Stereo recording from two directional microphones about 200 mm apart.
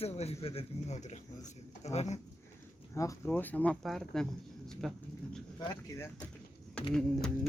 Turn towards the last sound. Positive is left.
turn(degrees=5)  # may be behind; listen again after turning